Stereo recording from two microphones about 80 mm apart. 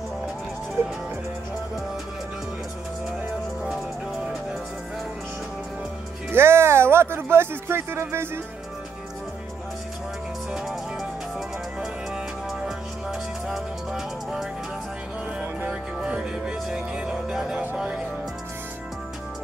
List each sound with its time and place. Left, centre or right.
0.8 s music: right
6.3 s speech: right
10.5 s music: centre
13.5 s music: centre
15.7 s music: centre